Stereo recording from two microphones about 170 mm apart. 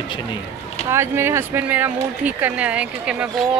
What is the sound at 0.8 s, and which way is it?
Speech, 15° right (ahead or behind).